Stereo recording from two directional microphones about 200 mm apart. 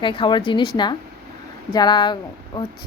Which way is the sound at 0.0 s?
25° left (ahead or behind).